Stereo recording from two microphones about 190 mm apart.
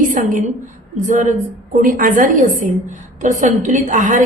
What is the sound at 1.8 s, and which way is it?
Speech, 45° right (ahead or behind).